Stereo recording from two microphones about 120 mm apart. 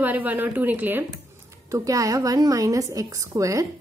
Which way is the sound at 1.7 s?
30° right (ahead or behind).